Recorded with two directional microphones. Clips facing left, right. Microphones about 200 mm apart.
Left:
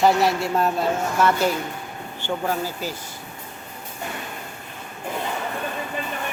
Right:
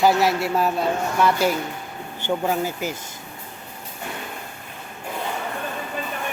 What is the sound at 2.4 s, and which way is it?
Speech, 20° right (ahead or behind).